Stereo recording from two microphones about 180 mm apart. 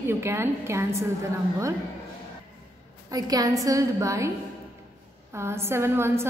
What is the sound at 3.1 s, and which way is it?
A woman's voice, 20° right (ahead or behind).